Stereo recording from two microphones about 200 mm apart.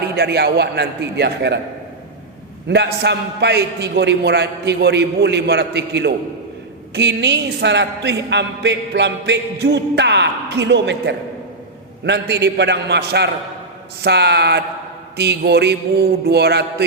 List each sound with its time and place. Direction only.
0.0 s a woman's voice: 55° right (ahead or behind)
2.6 s a woman's voice: 60° right (ahead or behind)